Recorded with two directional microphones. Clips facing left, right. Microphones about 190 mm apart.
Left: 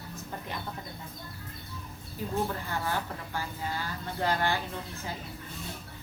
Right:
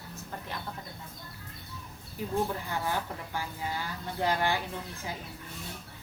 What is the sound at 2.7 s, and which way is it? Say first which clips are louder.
Speech: even; 15° right (ahead or behind).